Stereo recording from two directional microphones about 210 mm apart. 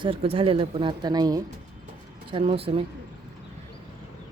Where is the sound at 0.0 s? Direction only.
25° right (ahead or behind).